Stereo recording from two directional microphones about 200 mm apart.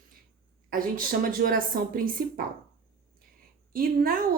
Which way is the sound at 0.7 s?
45° right (ahead or behind).